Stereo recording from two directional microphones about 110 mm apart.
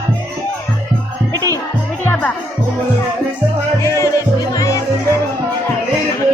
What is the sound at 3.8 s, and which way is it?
Music, 25° left (ahead or behind).